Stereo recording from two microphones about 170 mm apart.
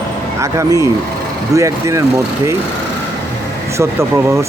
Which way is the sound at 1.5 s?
20° right (ahead or behind).